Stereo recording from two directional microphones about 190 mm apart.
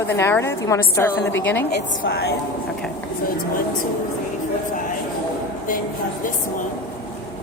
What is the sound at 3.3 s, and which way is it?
Speech, 50° left (ahead or behind).